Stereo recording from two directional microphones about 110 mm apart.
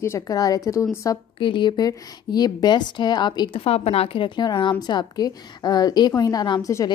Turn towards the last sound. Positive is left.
turn(degrees=40)  # may be behind; listen again after turning